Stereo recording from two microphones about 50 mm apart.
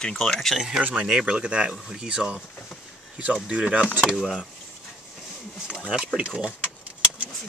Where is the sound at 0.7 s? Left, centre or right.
Right.